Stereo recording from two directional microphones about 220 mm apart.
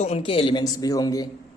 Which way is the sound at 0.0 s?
25° left (ahead or behind).